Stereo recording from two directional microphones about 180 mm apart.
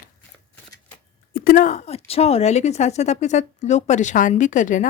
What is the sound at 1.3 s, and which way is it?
A woman's voice, 50° left (ahead or behind).